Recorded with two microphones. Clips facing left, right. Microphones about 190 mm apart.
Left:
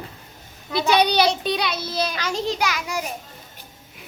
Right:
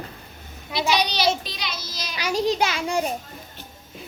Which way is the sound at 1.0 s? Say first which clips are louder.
Left 4 dB; 60° left (ahead or behind).